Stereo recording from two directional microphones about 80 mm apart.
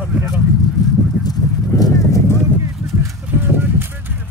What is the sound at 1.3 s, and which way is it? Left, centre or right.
Clip-clop, left.